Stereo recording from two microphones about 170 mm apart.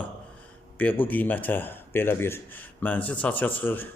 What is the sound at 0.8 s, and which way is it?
A man's voice, 10° left (ahead or behind).